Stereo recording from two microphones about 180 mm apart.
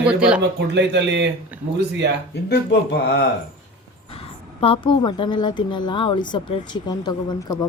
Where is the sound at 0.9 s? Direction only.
75° right (ahead or behind).